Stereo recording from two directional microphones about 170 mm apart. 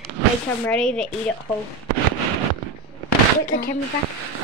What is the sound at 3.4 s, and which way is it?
Speech, 60° left (ahead or behind).